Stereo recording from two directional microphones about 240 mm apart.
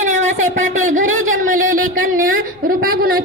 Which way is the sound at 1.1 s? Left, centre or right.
Right.